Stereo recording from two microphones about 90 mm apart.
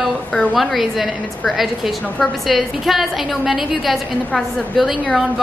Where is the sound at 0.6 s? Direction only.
Centre (ahead or behind).